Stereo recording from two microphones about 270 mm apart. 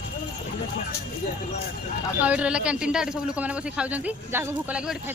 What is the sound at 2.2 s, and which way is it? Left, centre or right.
Speech, centre.